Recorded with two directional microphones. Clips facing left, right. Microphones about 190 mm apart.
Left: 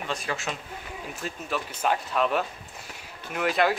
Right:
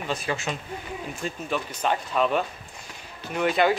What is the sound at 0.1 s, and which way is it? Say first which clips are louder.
Speech: right 3 dB; centre (ahead or behind).